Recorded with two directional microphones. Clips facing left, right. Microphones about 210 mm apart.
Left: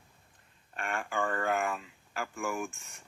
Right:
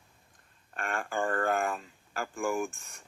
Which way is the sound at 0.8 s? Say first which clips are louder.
Right 1 dB; 40° right (ahead or behind).